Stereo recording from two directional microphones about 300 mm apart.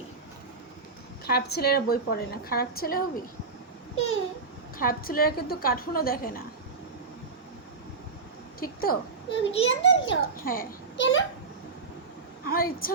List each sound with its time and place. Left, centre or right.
1.2 s a child's voice: left
4.8 s a woman's voice: left
8.6 s a child's voice: left
12.5 s a woman's voice: left